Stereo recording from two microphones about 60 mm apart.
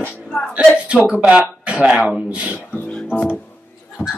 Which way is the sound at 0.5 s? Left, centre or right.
Right.